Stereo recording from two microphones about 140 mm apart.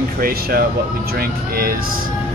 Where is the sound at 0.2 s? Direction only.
90° right.